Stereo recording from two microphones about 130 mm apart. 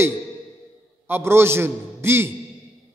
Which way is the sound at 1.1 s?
20° right (ahead or behind).